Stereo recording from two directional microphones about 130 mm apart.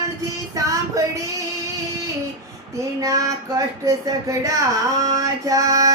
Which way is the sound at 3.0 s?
25° right (ahead or behind).